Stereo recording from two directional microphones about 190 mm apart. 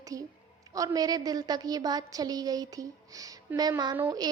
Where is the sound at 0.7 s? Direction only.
20° right (ahead or behind).